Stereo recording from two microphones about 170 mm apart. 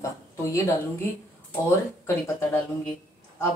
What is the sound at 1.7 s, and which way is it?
Speech, 15° left (ahead or behind).